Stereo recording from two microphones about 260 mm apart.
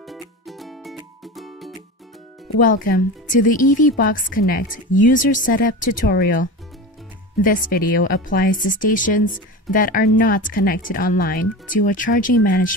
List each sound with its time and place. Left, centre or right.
0.0 s music: centre
2.5 s speech: left